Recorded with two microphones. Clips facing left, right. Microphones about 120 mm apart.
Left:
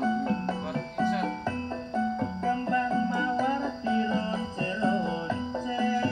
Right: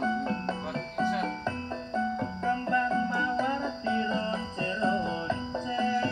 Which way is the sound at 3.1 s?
20° left (ahead or behind).